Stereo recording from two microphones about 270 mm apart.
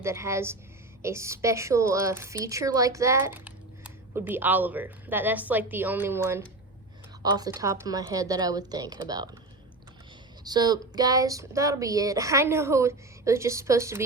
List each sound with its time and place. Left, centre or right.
0.0 s a woman's voice: centre
10.4 s a woman's voice: centre